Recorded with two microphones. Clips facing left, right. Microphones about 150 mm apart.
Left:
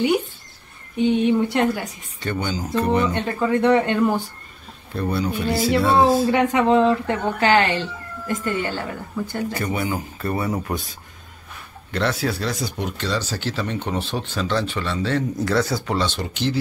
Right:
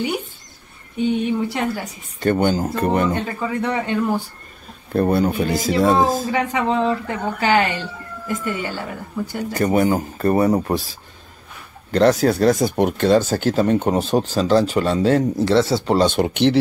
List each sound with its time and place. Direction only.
1.5 s a woman's voice: centre (ahead or behind)
2.1 s speech: 50° right (ahead or behind)
3.1 s a woman's voice: 5° right (ahead or behind)
4.9 s speech: 50° right (ahead or behind)
6.3 s a woman's voice: centre (ahead or behind)
9.5 s speech: 40° right (ahead or behind)
15.3 s speech: 25° right (ahead or behind)
16.0 s speech: 55° right (ahead or behind)